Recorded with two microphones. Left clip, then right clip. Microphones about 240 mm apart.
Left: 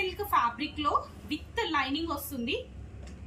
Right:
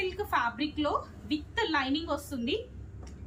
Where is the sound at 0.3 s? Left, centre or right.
Centre.